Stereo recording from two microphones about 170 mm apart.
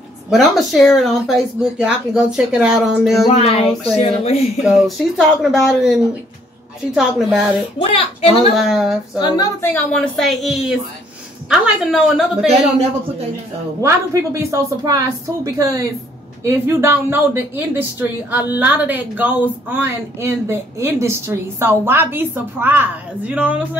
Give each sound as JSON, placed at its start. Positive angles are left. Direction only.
{"t": 0.3, "sound": "speech", "side_deg": 0}
{"t": 3.3, "sound": "speech", "side_deg": 35}
{"t": 4.6, "sound": "speech", "side_deg": 0}
{"t": 7.0, "sound": "speech", "side_deg": -5}
{"t": 8.5, "sound": "speech", "side_deg": 0}
{"t": 9.2, "sound": "a woman's voice", "side_deg": 25}
{"t": 9.7, "sound": "speech", "side_deg": 10}
{"t": 13.7, "sound": "a woman's voice", "side_deg": -20}